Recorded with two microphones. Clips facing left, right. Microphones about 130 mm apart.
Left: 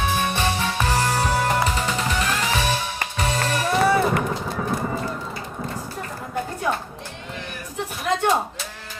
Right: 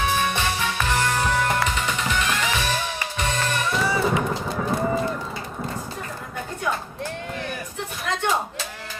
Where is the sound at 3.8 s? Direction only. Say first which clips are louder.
Left 7 dB; 55° left (ahead or behind).